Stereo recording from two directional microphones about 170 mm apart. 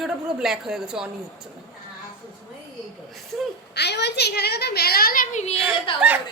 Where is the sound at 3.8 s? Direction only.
80° left; by 5.5 s 45° left (ahead or behind).